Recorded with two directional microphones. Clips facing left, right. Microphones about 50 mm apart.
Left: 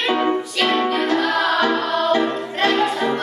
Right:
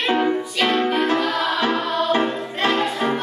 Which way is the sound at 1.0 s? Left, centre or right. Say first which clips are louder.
Left 2 dB; right.